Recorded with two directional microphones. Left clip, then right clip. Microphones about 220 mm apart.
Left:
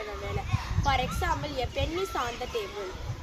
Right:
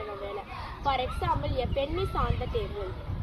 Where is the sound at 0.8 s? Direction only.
20° left (ahead or behind).